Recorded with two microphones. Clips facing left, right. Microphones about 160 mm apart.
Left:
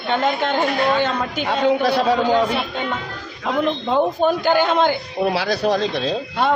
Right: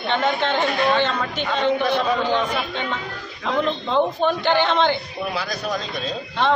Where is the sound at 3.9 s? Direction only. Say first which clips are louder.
Left 2 dB; 10° left (ahead or behind).